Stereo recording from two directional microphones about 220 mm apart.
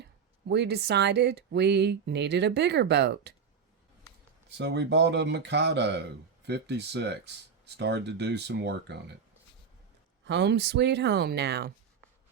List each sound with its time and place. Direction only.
0.0 s speech: 50° right (ahead or behind)
4.4 s speech: 50° right (ahead or behind)
10.2 s speech: 50° right (ahead or behind)